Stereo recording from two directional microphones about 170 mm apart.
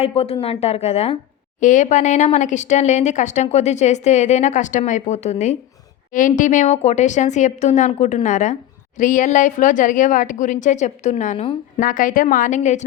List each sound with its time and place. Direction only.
0.0 s a woman's voice: 35° left (ahead or behind)